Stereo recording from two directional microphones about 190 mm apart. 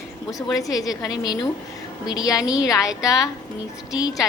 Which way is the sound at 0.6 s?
20° left (ahead or behind).